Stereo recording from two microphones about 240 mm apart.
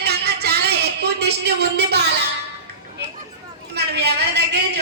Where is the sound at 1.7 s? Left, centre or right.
Right.